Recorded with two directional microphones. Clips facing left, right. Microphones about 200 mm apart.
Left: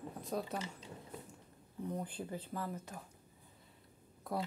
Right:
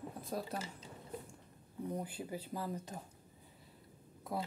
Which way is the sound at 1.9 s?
10° right (ahead or behind).